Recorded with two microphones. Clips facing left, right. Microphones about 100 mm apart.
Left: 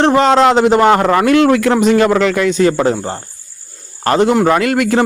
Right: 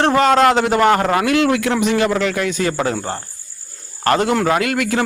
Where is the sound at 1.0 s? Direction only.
45° left (ahead or behind).